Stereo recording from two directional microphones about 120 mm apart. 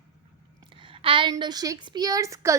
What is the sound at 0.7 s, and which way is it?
A woman's voice, 45° right (ahead or behind).